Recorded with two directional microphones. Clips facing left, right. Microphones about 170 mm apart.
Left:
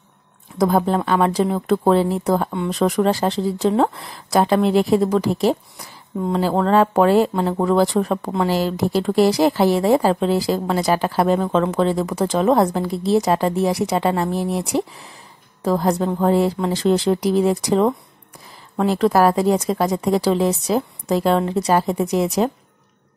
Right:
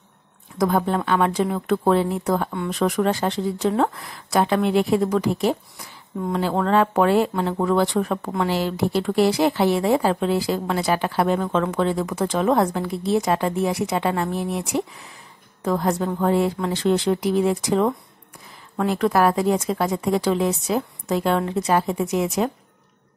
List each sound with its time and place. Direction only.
0.6 s speech: 35° left (ahead or behind)